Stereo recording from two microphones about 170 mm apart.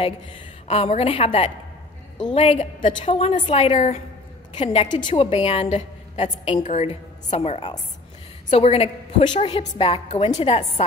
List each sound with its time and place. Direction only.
0.7 s a woman's voice: 35° left (ahead or behind)